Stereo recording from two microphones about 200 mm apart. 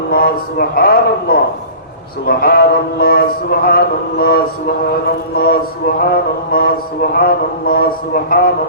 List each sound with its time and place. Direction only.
0.1 s mantra: 50° left (ahead or behind)